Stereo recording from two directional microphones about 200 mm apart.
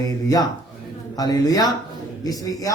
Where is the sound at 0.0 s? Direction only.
20° left (ahead or behind).